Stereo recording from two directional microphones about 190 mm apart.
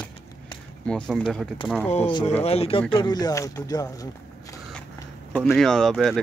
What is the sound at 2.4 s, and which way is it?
Speech, 30° left (ahead or behind).